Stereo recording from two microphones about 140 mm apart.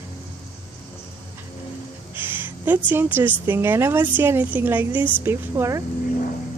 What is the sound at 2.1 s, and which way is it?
A woman's voice, 15° right (ahead or behind).